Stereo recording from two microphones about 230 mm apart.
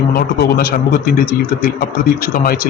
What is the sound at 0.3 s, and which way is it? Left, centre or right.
A man's voice, left.